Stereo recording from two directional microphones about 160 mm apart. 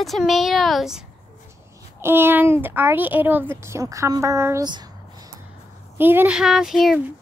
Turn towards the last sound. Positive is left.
turn(degrees=0)  # may be behind; listen again after turning